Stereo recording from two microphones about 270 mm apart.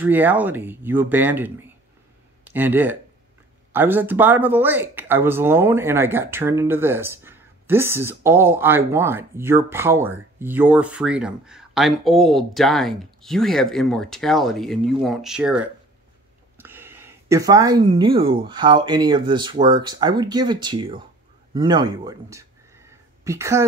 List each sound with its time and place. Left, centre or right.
0.0 s speech: centre